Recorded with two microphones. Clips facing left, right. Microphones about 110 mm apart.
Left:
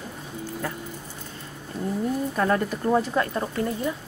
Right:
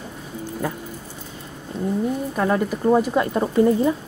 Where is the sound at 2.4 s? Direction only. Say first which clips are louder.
Right 4 dB; 10° right (ahead or behind).